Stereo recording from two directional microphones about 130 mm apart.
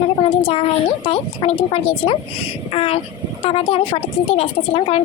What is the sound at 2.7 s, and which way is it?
A woman's voice, 50° left (ahead or behind).